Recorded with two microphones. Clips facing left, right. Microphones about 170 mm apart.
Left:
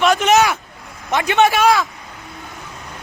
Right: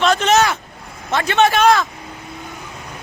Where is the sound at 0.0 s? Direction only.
15° left (ahead or behind).